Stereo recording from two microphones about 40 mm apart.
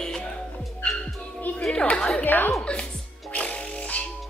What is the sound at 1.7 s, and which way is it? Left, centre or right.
Speech, left.